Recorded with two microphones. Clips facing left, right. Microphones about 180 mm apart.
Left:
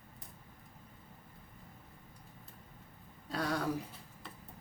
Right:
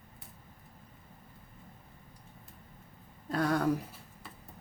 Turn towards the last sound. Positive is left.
turn(degrees=-50)  # may be behind; listen again after turning